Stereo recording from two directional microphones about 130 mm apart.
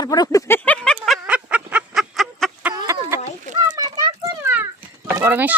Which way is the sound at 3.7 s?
30° right (ahead or behind).